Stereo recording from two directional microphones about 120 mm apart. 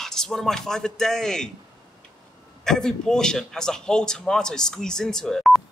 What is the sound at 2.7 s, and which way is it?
A man's voice, 5° left (ahead or behind).